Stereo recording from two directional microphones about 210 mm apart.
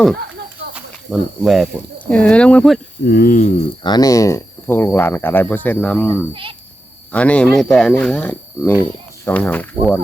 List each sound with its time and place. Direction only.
0.7 s speech: centre (ahead or behind)
3.1 s speech: 45° left (ahead or behind)
3.8 s speech: 20° left (ahead or behind)
6.3 s speech: 25° right (ahead or behind)
7.1 s speech: 5° left (ahead or behind)